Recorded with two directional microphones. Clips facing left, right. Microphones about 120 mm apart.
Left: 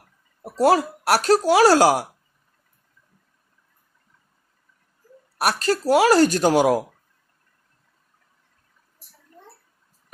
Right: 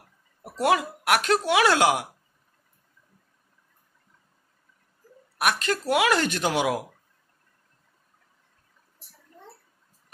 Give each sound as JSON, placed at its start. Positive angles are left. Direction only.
{"t": 0.4, "sound": "speech", "side_deg": 35}
{"t": 5.4, "sound": "speech", "side_deg": 35}